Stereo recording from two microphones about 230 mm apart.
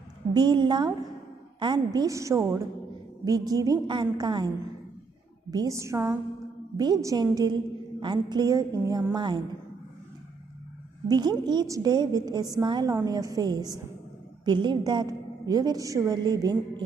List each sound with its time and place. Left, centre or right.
0.3 s a woman's voice: centre
5.5 s a woman's voice: centre
11.1 s a woman's voice: centre